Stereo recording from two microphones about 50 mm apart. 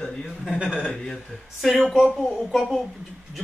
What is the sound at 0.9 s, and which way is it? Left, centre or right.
Speech, centre.